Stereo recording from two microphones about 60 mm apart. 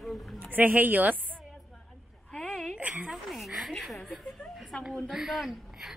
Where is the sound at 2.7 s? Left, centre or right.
Right.